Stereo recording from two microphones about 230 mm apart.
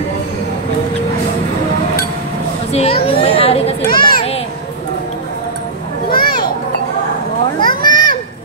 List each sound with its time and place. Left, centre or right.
2.7 s children playing: left
6.1 s children playing: centre
7.6 s children playing: centre